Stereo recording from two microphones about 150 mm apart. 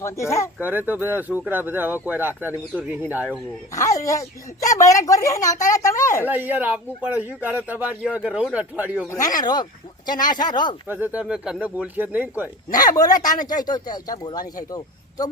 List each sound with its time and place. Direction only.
0.0 s speech: 20° left (ahead or behind)
0.6 s speech: 15° right (ahead or behind)
3.7 s speech: 20° left (ahead or behind)
6.2 s speech: 10° right (ahead or behind)
9.0 s speech: 20° left (ahead or behind)
10.8 s speech: 10° right (ahead or behind)
13.0 s speech: 25° left (ahead or behind)